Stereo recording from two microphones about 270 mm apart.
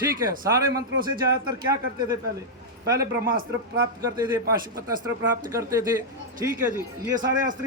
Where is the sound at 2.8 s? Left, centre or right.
Centre.